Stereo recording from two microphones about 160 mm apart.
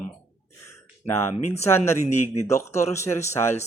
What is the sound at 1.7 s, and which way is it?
Speech, 15° left (ahead or behind).